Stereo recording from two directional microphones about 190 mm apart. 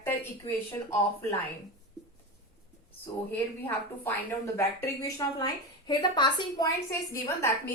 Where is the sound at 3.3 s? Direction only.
10° left (ahead or behind).